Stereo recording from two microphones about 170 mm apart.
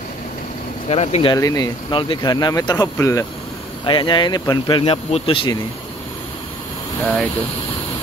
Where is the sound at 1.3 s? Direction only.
20° left (ahead or behind).